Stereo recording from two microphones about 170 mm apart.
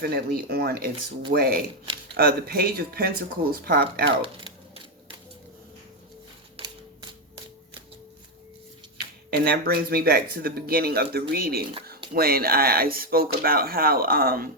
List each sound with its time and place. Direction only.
0.0 s speech: 60° right (ahead or behind)
6.6 s a sound: 35° right (ahead or behind)
9.3 s speech: 65° right (ahead or behind)